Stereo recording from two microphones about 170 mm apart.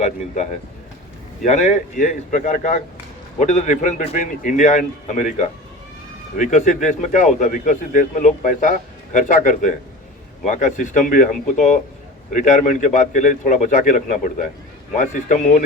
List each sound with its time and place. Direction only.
1.5 s a man's voice: 45° left (ahead or behind)